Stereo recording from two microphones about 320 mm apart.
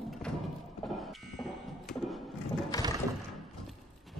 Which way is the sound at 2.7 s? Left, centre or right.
Centre.